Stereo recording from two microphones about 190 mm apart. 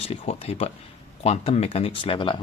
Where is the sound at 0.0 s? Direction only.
30° left (ahead or behind).